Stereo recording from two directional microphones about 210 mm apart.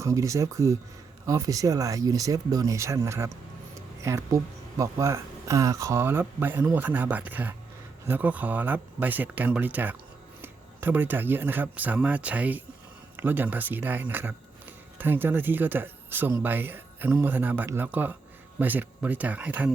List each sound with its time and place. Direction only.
0.0 s speech: 15° right (ahead or behind)